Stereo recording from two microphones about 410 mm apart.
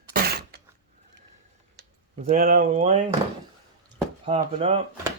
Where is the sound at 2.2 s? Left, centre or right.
Centre.